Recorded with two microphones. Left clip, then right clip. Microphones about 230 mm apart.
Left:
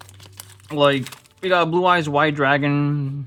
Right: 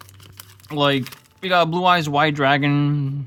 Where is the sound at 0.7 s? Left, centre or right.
Right.